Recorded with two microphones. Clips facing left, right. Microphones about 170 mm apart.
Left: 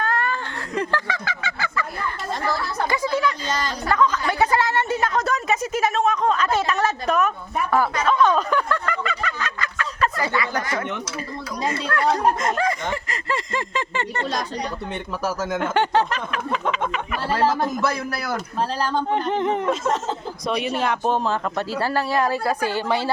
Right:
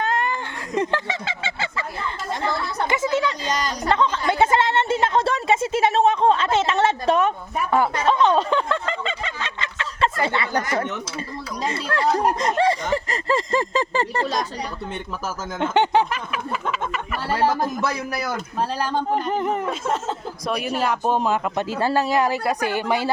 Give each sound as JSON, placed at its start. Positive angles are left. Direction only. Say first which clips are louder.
{"t": 0.0, "sound": "a sound", "louder": "right 1 dB", "side_deg": -20}
{"t": 11.7, "sound": "speech", "louder": "even", "side_deg": -25}
{"t": 15.5, "sound": "speech", "louder": "right 3 dB", "side_deg": -20}
{"t": 17.8, "sound": "speech", "louder": "left 1 dB", "side_deg": -15}